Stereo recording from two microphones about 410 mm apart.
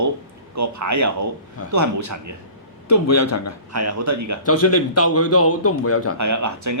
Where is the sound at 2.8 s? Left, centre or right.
Left.